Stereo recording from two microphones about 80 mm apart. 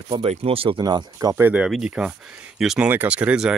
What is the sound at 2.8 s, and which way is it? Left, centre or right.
Speech, centre.